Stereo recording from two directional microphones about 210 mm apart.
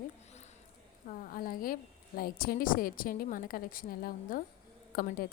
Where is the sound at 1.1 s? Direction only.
40° left (ahead or behind).